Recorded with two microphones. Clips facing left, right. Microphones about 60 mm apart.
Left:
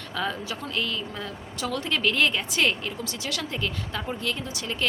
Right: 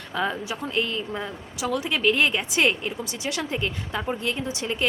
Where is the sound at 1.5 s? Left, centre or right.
Centre.